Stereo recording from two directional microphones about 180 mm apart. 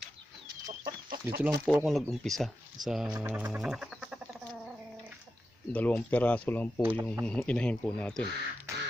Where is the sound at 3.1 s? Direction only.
10° right (ahead or behind).